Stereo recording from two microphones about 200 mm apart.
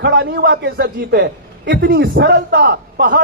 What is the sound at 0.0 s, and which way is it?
A man's voice, 55° right (ahead or behind).